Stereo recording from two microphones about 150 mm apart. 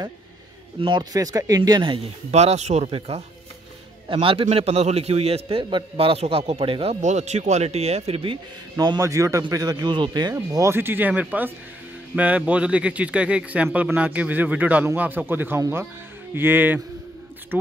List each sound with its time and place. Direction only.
0.7 s speech: 30° right (ahead or behind)
2.3 s a man's voice: 45° right (ahead or behind)
8.7 s speech: 25° right (ahead or behind)